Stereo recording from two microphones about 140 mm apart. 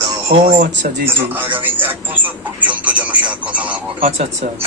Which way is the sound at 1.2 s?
15° right (ahead or behind).